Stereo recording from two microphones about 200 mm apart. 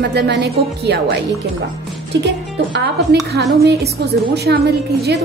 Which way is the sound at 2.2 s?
60° right (ahead or behind).